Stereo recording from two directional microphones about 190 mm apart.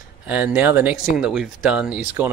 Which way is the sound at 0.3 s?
10° right (ahead or behind).